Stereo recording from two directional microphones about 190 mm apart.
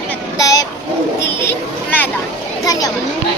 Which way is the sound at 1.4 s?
10° left (ahead or behind).